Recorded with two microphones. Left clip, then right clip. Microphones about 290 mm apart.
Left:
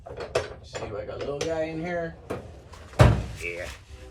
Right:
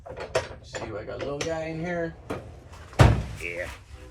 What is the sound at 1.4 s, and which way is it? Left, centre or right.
Speech, right.